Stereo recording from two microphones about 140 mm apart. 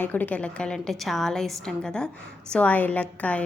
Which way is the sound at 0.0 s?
10° left (ahead or behind).